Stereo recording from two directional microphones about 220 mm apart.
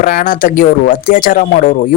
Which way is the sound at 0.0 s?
40° left (ahead or behind).